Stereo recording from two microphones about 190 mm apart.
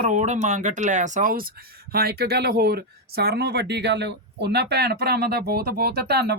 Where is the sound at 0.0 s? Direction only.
40° right (ahead or behind).